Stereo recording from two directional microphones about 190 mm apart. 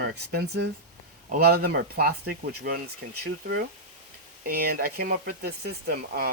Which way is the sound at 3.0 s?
70° right (ahead or behind).